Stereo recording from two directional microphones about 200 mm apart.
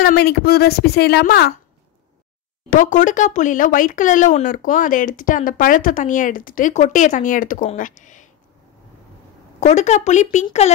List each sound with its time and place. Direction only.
0.0 s a woman's voice: 50° left (ahead or behind)
2.7 s speech: 40° left (ahead or behind)
9.6 s speech: 35° left (ahead or behind)